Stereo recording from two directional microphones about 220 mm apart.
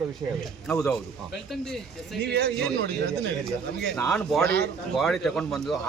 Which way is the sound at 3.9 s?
5° left (ahead or behind).